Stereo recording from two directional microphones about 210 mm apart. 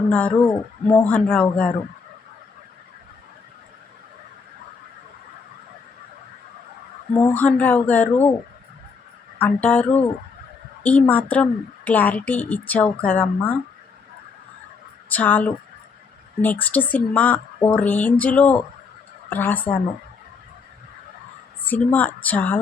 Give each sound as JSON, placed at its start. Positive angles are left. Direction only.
{"t": 0.1, "sound": "a man's voice", "side_deg": 5}
{"t": 7.3, "sound": "speech", "side_deg": 5}
{"t": 9.4, "sound": "speech", "side_deg": 5}
{"t": 15.1, "sound": "speech", "side_deg": 10}
{"t": 21.7, "sound": "speech", "side_deg": 10}